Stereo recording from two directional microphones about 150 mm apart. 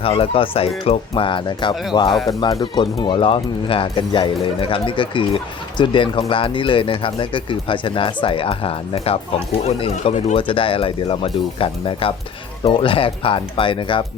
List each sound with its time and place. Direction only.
0.2 s speech: 40° left (ahead or behind)